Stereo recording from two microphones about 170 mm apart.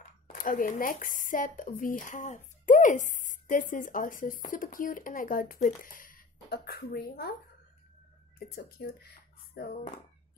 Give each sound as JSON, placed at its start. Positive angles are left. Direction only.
{"t": 0.3, "sound": "speech", "side_deg": 55}
{"t": 8.5, "sound": "speech", "side_deg": 65}